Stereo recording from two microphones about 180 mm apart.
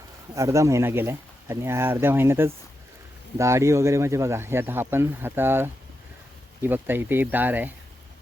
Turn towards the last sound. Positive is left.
turn(degrees=-10)  # may be behind; listen again after turning